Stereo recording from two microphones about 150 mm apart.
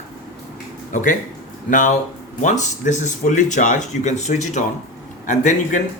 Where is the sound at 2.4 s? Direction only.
55° left (ahead or behind).